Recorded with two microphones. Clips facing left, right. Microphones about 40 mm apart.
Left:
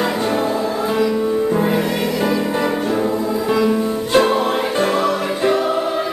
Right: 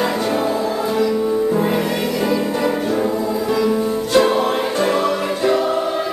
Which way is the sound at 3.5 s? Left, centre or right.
Centre.